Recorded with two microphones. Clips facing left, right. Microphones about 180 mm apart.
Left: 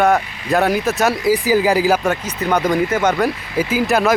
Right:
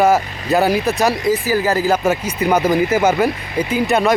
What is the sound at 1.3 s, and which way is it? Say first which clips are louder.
Speech: left 2 dB; 15° left (ahead or behind).